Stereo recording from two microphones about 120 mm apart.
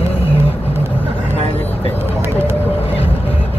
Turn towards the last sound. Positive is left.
turn(degrees=60)  # may be behind; listen again after turning